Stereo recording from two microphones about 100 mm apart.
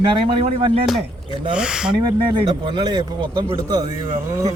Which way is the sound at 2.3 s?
55° right (ahead or behind).